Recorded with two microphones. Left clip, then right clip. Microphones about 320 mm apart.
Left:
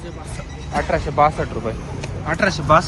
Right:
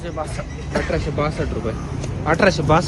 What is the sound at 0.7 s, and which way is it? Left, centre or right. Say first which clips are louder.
Speech: left 4 dB; centre.